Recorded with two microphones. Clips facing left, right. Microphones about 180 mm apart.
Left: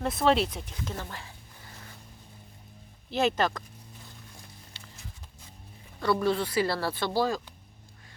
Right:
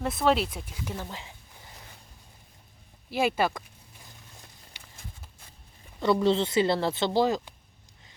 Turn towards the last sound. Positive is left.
turn(degrees=-20)  # may be behind; listen again after turning